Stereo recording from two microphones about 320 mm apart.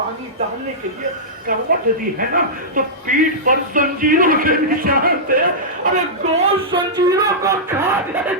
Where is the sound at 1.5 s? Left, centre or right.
Right.